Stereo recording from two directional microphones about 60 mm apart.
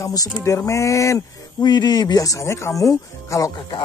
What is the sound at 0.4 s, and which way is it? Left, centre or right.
Speech, left.